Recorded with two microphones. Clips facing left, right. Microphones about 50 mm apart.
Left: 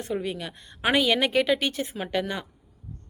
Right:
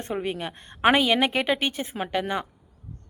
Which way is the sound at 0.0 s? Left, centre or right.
Right.